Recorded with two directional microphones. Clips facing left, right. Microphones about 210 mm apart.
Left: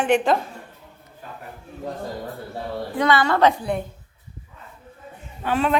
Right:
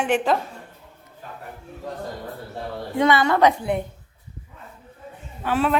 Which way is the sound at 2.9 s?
20° right (ahead or behind).